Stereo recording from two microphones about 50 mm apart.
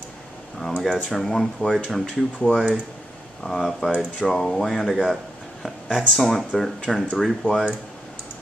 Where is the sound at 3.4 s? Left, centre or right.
Centre.